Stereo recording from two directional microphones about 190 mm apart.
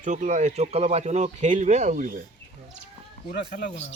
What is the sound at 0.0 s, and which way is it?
Speech, 40° right (ahead or behind).